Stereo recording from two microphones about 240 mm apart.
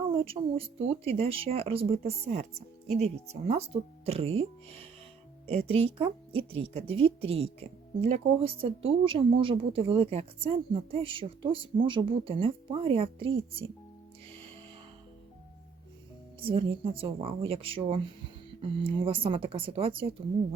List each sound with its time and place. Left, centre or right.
0.4 s speech: centre
5.5 s speech: right
16.4 s speech: right